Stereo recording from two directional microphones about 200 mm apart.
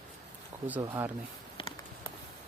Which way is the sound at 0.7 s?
15° right (ahead or behind).